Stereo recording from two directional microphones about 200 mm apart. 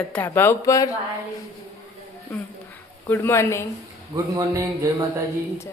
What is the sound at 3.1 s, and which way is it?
Speech, 10° left (ahead or behind).